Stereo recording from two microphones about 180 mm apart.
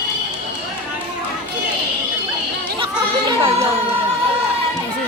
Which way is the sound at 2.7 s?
30° right (ahead or behind).